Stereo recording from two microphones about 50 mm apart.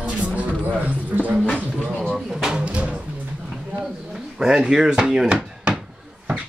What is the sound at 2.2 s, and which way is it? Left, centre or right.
Music, centre.